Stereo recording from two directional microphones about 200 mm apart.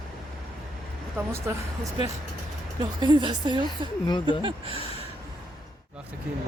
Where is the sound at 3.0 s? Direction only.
20° right (ahead or behind).